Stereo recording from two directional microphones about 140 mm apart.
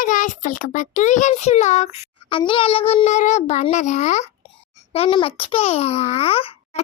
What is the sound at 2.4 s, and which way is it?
A child's voice, 40° left (ahead or behind).